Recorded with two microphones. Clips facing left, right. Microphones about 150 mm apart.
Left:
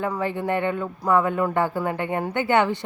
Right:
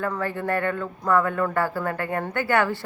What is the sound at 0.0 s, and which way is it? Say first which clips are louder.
A woman's voice: left 1 dB; 20° left (ahead or behind).